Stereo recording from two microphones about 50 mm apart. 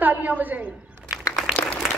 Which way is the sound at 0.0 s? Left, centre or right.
Right.